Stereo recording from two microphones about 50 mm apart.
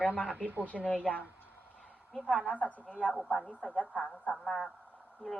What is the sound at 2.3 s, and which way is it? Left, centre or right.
Speech, left.